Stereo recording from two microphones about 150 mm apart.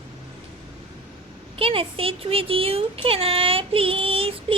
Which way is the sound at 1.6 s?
40° right (ahead or behind).